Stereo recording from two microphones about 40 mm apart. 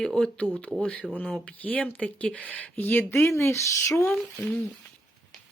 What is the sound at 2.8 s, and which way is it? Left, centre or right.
Speech, left.